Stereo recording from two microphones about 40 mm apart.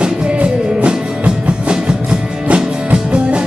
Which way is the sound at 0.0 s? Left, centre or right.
Right.